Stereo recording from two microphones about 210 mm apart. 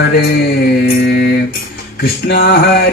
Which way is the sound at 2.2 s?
50° left (ahead or behind).